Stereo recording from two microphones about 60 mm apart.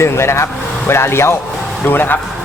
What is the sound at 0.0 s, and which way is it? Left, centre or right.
Speech, left.